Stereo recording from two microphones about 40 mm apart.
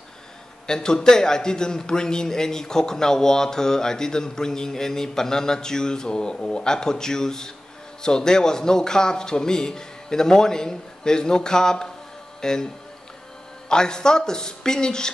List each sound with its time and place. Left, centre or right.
0.7 s a man's voice: centre
13.7 s a man's voice: centre